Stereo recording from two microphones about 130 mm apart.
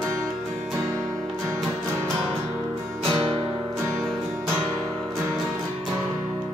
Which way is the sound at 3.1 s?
35° right (ahead or behind).